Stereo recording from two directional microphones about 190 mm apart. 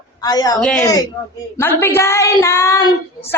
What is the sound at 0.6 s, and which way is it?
Speech, 5° left (ahead or behind).